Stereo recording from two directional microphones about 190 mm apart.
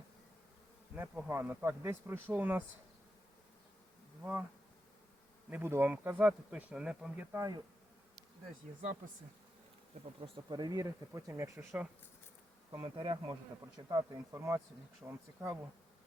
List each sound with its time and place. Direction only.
0.9 s speech: 10° right (ahead or behind)
4.2 s bee: 10° right (ahead or behind)
5.5 s speech: 10° right (ahead or behind)
10.2 s speech: 25° right (ahead or behind)
12.7 s bee: 25° right (ahead or behind)
13.7 s speech: 20° right (ahead or behind)